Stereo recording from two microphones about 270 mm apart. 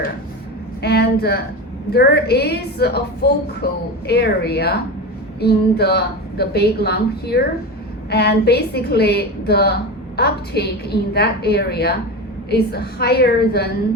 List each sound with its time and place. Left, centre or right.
0.8 s a woman's voice: left